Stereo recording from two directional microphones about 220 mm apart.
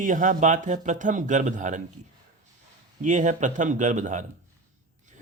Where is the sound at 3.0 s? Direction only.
35° right (ahead or behind).